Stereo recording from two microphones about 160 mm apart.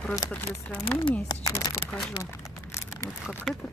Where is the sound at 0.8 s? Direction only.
35° left (ahead or behind).